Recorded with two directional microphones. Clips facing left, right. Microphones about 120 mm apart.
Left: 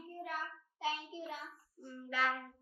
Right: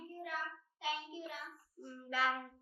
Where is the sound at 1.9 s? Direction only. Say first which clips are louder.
Even; 5° right (ahead or behind).